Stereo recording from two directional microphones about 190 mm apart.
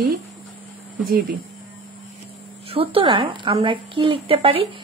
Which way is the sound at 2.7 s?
30° right (ahead or behind).